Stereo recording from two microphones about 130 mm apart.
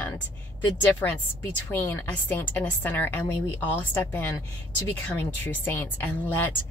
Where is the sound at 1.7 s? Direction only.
15° left (ahead or behind).